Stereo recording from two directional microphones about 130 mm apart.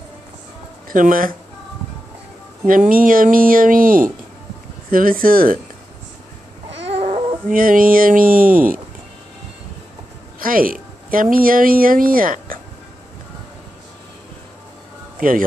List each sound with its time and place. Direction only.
0.8 s speech: 90° right
2.6 s speech: 90° right
6.9 s babbling: 50° right (ahead or behind)
7.4 s speech: 90° right
10.4 s speech: 90° right
15.1 s speech: 90° right